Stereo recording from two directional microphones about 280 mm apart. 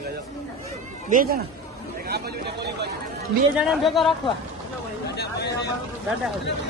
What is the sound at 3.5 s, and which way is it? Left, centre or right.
Speech, centre.